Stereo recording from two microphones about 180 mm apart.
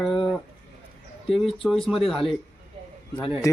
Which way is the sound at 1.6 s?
Centre (ahead or behind).